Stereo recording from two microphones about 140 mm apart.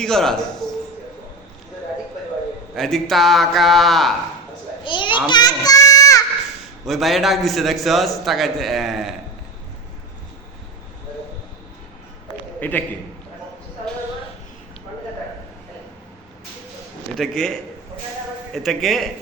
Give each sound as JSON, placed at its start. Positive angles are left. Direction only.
{"t": 0.0, "sound": "a man's voice", "side_deg": 5}
{"t": 2.7, "sound": "a man's voice", "side_deg": 0}
{"t": 4.8, "sound": "a child's voice", "side_deg": 35}
{"t": 5.3, "sound": "child singing", "side_deg": 30}
{"t": 6.8, "sound": "a man's voice", "side_deg": 0}
{"t": 12.5, "sound": "a man's voice", "side_deg": 15}
{"t": 17.2, "sound": "a man's voice", "side_deg": 5}